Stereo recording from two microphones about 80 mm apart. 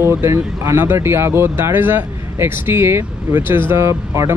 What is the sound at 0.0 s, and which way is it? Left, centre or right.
Speech, right.